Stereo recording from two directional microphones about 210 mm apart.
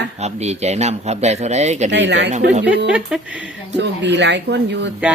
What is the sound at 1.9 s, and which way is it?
Speech, 55° right (ahead or behind).